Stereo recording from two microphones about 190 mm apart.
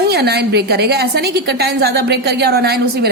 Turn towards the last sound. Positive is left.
turn(degrees=-55)  # may be behind; listen again after turning